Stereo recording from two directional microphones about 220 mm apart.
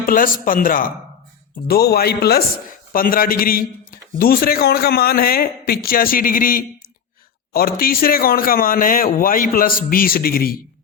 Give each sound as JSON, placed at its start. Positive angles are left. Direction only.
{"t": 0.0, "sound": "a man's voice", "side_deg": 40}